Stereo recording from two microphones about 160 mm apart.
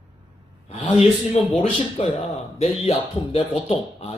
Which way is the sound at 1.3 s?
45° left (ahead or behind).